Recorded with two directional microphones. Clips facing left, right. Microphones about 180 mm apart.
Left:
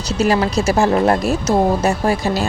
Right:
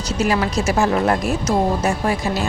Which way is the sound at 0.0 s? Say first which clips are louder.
Left 3 dB; 30° left (ahead or behind).